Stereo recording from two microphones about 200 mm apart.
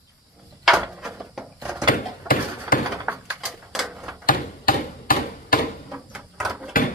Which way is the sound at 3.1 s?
5° right (ahead or behind).